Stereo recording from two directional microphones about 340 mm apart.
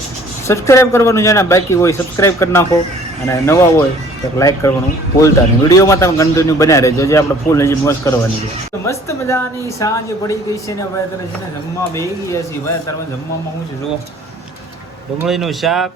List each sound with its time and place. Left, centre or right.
0.4 s a man's voice: centre
11.9 s a man's voice: centre
15.2 s speech: centre